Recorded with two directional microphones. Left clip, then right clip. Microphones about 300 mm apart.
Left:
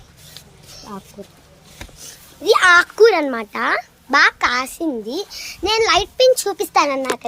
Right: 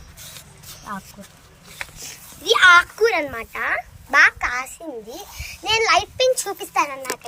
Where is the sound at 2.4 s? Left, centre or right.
Centre.